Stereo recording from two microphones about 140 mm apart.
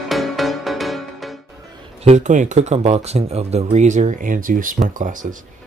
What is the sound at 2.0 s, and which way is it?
Speech, 55° right (ahead or behind).